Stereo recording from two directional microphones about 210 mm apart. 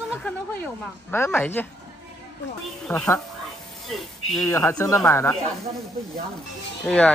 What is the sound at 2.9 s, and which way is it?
Speech, 10° left (ahead or behind).